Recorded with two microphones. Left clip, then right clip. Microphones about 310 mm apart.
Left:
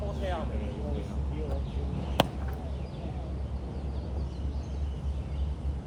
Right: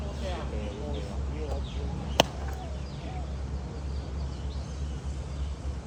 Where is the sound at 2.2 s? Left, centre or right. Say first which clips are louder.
Right 3 dB; right.